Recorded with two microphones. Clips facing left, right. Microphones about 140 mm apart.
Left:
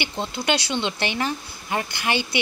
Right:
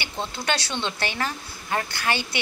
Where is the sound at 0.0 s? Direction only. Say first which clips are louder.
Left 3 dB; 15° left (ahead or behind).